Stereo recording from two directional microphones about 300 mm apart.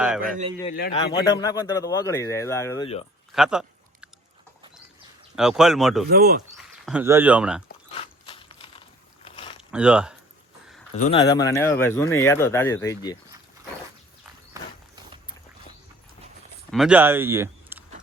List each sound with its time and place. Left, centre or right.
0.2 s a man's voice: right
0.7 s a man's voice: left
1.1 s speech: centre
3.3 s chewing: centre
5.4 s speech: centre
6.1 s speech: right
6.6 s speech: centre
7.9 s a sound: centre
9.6 s speech: centre
10.9 s speech: left
14.5 s horse: centre
16.7 s speech: centre